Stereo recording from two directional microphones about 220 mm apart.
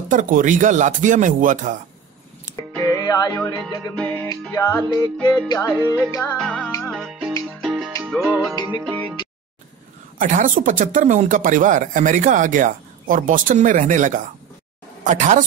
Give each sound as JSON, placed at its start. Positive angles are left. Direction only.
{"t": 0.1, "sound": "speech", "side_deg": -35}
{"t": 2.5, "sound": "a sound", "side_deg": 10}
{"t": 3.0, "sound": "music", "side_deg": 15}
{"t": 6.9, "sound": "music", "side_deg": 0}
{"t": 10.1, "sound": "speech", "side_deg": -35}